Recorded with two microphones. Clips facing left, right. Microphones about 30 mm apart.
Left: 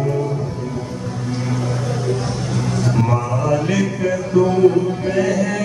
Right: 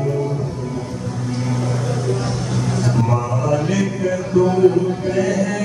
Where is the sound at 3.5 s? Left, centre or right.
Centre.